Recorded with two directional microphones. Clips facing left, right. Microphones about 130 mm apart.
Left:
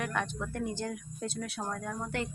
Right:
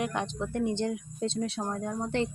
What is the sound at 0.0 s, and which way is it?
A woman's voice, 20° right (ahead or behind).